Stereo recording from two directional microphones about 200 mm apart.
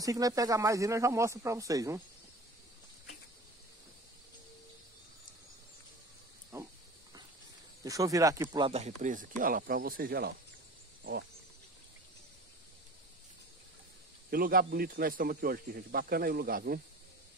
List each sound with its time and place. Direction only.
0.0 s speech: 15° right (ahead or behind)
7.8 s speech: 15° right (ahead or behind); by 10.3 s 50° right (ahead or behind)
14.3 s speech: 45° right (ahead or behind)